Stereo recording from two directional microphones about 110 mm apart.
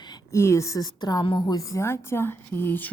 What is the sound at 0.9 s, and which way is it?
A woman's voice, 40° left (ahead or behind).